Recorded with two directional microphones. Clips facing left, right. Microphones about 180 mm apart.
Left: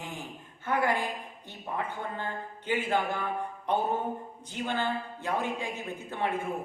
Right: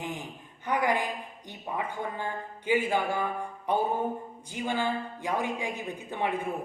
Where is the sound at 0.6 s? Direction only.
15° right (ahead or behind).